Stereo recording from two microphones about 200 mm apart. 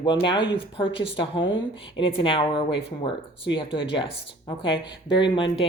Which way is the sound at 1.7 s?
25° left (ahead or behind).